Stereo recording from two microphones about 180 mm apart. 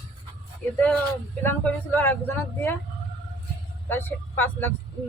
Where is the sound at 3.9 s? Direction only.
10° left (ahead or behind).